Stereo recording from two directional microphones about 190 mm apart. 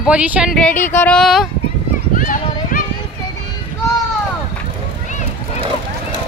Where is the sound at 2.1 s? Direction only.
45° left (ahead or behind).